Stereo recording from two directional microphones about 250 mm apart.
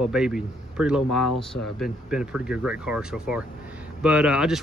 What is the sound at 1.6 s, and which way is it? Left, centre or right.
Speech, left.